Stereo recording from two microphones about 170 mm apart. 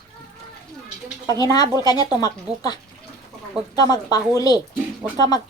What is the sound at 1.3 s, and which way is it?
Speech, 20° left (ahead or behind).